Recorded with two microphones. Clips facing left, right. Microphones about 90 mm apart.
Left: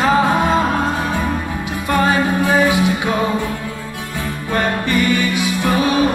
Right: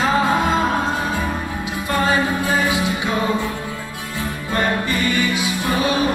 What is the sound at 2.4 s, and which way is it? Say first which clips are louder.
Music: left 5 dB; 55° left (ahead or behind).